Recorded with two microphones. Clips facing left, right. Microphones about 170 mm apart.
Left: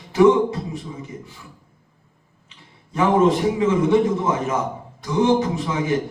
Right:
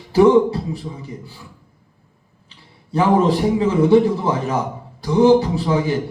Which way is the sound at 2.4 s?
35° right (ahead or behind).